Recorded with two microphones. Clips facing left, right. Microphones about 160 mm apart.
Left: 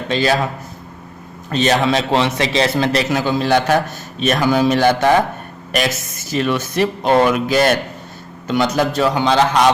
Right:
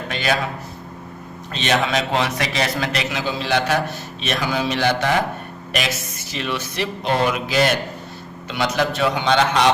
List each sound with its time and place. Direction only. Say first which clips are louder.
0.1 s a man's voice: left 6 dB; 30° left (ahead or behind)
1.5 s a man's voice: left 5 dB; 40° left (ahead or behind)